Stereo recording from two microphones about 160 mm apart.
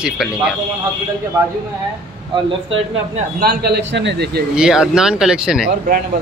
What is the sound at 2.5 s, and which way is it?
Speech, 35° right (ahead or behind).